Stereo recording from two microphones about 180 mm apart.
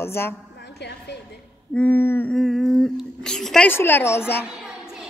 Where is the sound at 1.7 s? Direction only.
10° left (ahead or behind).